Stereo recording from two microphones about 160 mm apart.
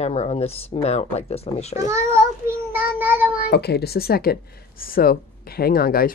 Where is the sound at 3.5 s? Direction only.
90° left; by 6.1 s 70° left (ahead or behind).